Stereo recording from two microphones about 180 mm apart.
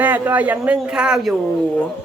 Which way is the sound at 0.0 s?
10° right (ahead or behind).